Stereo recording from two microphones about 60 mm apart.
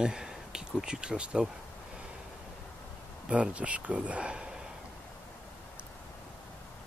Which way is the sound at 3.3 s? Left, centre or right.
Right.